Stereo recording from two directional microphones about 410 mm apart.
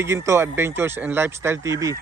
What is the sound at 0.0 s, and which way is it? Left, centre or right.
Speech, centre.